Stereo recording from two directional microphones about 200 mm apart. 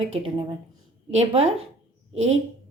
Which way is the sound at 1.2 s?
30° right (ahead or behind).